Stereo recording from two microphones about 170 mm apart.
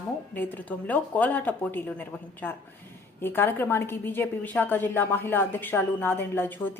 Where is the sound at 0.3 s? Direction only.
10° left (ahead or behind).